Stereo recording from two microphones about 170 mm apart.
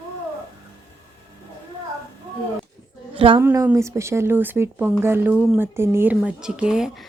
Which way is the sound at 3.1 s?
30° right (ahead or behind).